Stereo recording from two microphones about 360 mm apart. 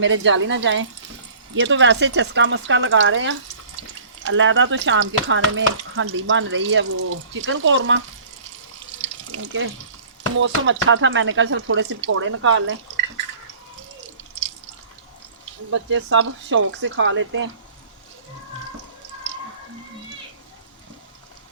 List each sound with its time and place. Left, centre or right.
0.0 s speech: right
9.3 s speech: right
15.9 s speech: right